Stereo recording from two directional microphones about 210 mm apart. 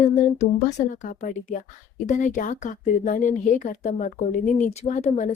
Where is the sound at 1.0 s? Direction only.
35° left (ahead or behind).